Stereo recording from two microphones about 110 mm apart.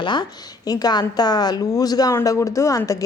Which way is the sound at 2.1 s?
25° left (ahead or behind).